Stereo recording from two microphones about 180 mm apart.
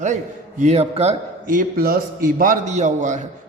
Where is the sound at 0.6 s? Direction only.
35° right (ahead or behind).